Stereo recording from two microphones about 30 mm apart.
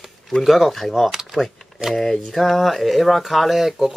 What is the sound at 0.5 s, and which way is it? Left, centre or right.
Speech, centre.